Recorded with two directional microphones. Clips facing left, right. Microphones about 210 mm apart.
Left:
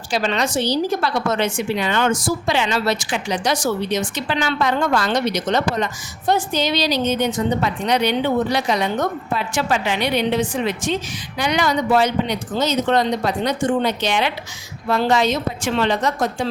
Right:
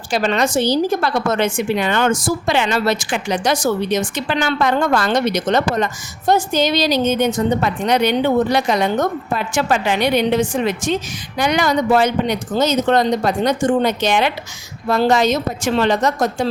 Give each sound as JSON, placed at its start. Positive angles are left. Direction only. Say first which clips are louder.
{"t": 0.1, "sound": "a woman's voice", "louder": "right 3 dB", "side_deg": -50}